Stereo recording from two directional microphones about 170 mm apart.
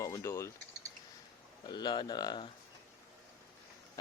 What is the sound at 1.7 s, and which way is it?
Speech, 25° left (ahead or behind).